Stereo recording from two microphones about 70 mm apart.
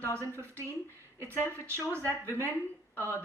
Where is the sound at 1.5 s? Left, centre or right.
Right.